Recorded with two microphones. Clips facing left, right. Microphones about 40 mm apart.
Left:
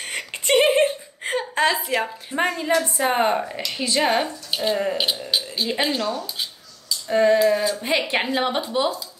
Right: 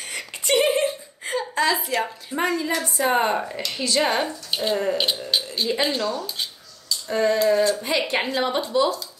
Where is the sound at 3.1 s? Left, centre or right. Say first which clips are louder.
Left 1 dB; centre.